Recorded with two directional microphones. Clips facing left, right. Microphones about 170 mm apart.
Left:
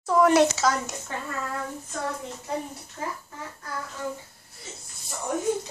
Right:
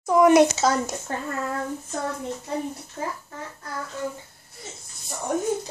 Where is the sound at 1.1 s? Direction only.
45° right (ahead or behind).